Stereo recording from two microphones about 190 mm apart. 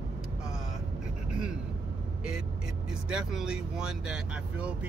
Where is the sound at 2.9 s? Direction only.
5° right (ahead or behind).